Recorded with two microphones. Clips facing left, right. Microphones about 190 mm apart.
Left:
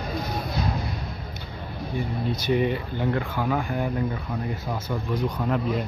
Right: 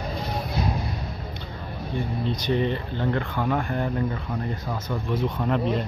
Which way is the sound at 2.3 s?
10° left (ahead or behind).